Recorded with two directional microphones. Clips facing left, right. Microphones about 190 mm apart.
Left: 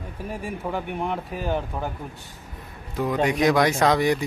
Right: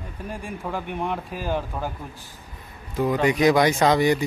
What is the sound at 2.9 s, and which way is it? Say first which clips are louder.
A man's voice: right 2 dB; centre (ahead or behind).